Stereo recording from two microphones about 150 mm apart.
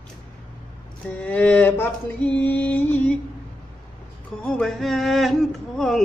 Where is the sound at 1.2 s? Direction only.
10° left (ahead or behind).